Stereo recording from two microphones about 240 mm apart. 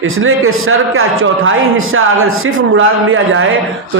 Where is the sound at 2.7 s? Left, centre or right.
Right.